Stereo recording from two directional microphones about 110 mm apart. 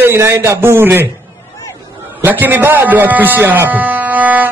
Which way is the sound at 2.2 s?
20° right (ahead or behind).